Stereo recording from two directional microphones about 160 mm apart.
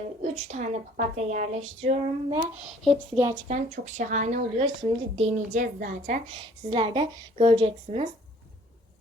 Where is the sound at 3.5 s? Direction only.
50° right (ahead or behind).